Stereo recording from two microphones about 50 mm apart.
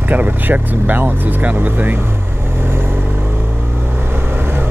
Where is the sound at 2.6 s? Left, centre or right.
Right.